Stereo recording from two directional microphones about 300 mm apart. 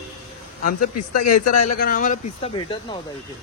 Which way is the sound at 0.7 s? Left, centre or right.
Left.